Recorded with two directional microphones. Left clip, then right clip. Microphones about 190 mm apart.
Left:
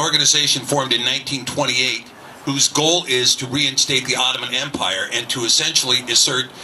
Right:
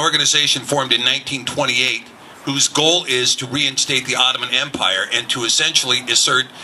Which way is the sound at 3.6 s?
65° right (ahead or behind).